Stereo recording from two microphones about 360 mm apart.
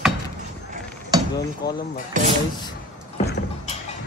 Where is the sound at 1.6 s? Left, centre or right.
Left.